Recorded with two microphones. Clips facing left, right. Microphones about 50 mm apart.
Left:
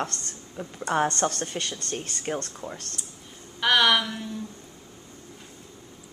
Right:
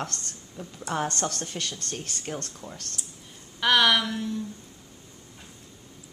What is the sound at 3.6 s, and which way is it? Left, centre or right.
Speech, centre.